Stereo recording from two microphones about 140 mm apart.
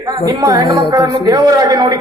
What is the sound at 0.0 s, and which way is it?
A woman's voice, 25° right (ahead or behind).